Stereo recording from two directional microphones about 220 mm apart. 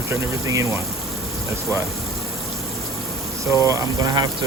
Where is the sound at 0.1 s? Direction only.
15° right (ahead or behind).